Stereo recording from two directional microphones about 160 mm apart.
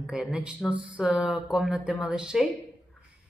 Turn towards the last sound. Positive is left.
turn(degrees=-5)  # may be behind; listen again after turning